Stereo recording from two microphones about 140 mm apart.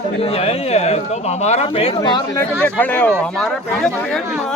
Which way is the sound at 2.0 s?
30° left (ahead or behind).